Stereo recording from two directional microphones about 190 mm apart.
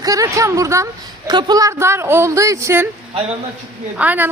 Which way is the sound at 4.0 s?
10° right (ahead or behind).